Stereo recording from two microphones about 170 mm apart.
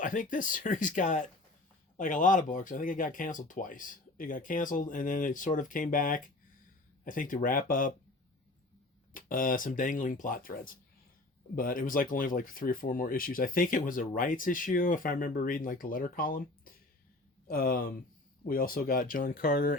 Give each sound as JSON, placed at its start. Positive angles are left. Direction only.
{"t": 0.0, "sound": "speech", "side_deg": 50}
{"t": 9.1, "sound": "speech", "side_deg": 55}